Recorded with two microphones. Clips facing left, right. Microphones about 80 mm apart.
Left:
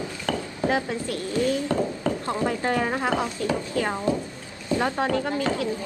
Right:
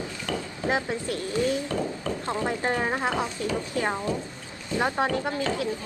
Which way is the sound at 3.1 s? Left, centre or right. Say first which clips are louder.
Left 3 dB; left.